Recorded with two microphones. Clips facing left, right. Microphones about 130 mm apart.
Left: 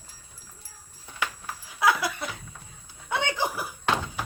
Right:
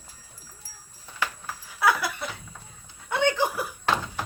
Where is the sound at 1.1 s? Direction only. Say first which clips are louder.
Right 1 dB; 15° left (ahead or behind).